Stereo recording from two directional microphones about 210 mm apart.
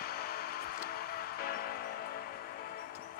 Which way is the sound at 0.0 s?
45° left (ahead or behind).